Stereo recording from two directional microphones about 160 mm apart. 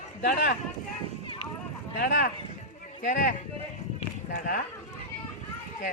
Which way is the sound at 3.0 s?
55° left (ahead or behind).